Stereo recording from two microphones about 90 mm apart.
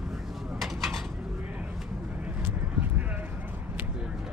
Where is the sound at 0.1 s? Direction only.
Centre (ahead or behind).